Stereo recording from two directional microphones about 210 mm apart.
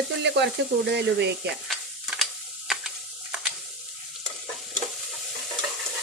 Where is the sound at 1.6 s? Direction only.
Centre (ahead or behind).